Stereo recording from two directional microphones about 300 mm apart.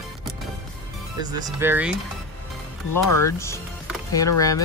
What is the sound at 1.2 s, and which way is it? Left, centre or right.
Speech, centre.